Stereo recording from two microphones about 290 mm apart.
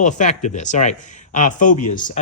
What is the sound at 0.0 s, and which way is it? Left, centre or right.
Speech, left.